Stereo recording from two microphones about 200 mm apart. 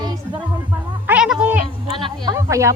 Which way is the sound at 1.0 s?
5° right (ahead or behind).